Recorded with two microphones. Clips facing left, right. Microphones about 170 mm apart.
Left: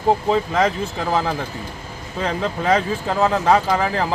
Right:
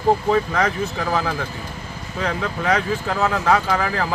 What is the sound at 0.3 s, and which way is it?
Speech, 25° left (ahead or behind).